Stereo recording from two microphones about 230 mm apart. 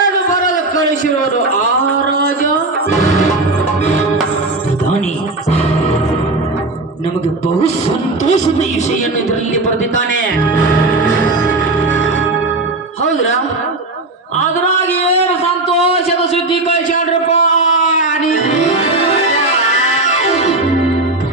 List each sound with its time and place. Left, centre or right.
8.2 s speech: left
14.8 s a sound: left
19.3 s music: left